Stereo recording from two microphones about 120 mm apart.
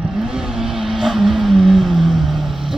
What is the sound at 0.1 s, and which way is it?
Vehicle, 5° right (ahead or behind).